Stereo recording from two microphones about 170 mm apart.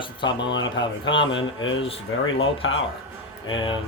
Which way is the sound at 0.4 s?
90° left.